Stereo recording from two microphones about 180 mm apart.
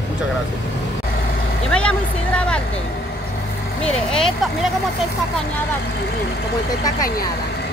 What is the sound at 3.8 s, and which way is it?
Speech, 5° left (ahead or behind).